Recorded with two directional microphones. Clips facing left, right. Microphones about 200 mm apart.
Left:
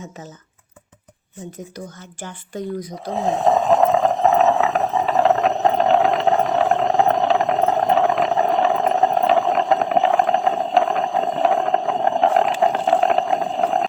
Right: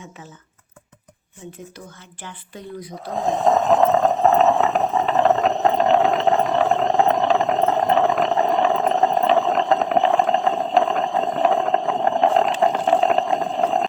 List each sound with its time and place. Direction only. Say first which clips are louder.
2.2 s speech: left 8 dB; 45° left (ahead or behind)
3.2 s a sound: even; 5° left (ahead or behind)
4.1 s boat: even; centre (ahead or behind)